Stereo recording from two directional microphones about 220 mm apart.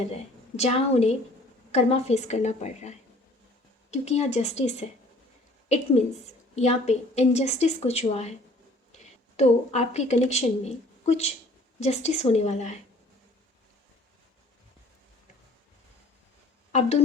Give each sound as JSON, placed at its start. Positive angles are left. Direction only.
{"t": 0.0, "sound": "a woman's voice", "side_deg": 30}
{"t": 3.9, "sound": "a woman's voice", "side_deg": 30}